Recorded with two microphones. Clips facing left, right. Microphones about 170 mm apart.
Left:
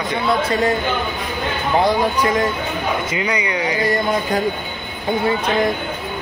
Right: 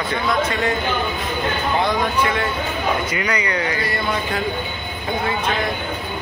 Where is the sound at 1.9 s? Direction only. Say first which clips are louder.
Left 3 dB; 35° left (ahead or behind).